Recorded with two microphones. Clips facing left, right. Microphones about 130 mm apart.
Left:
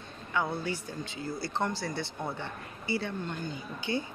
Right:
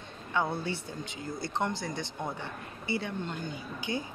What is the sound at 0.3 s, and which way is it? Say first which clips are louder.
Speech: right 1 dB; 25° right (ahead or behind).